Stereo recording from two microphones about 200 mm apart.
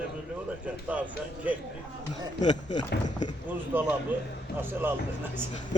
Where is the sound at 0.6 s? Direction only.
5° right (ahead or behind).